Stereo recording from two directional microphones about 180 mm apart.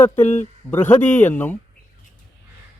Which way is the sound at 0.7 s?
10° left (ahead or behind).